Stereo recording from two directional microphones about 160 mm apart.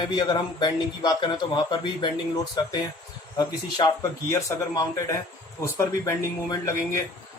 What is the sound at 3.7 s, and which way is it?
Speech, 25° left (ahead or behind).